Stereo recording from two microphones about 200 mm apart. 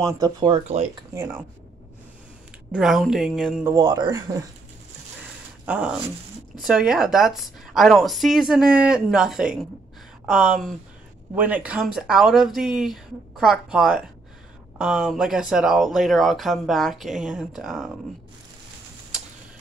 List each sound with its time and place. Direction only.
0.0 s speech: 15° right (ahead or behind)
0.5 s speech: 35° right (ahead or behind)
2.7 s speech: centre (ahead or behind)
3.7 s a man's voice: 20° right (ahead or behind)
5.7 s speech: 5° right (ahead or behind)